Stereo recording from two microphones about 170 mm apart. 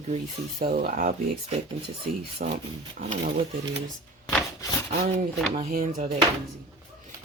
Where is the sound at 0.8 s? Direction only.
55° right (ahead or behind).